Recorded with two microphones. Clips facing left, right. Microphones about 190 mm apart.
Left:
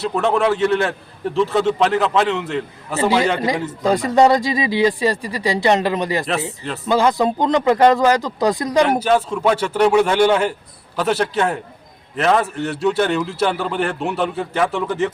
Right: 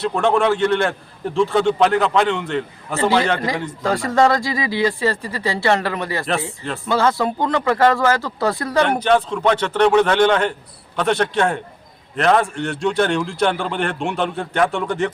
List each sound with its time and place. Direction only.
0.0 s a man's voice: centre (ahead or behind)